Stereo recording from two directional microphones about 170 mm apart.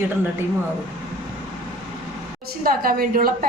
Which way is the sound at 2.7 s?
60° right (ahead or behind).